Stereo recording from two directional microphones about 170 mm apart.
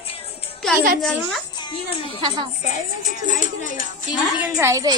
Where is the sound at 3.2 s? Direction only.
50° left (ahead or behind).